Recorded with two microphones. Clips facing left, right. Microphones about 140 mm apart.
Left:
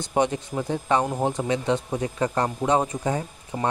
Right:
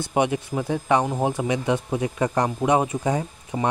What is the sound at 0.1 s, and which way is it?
Speech, 10° right (ahead or behind).